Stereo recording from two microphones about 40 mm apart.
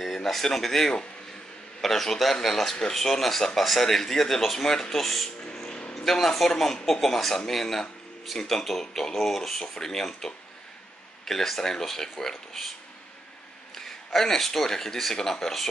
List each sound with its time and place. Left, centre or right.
0.0 s a man's voice: centre
5.4 s music: left
6.0 s speech: centre
13.7 s speech: centre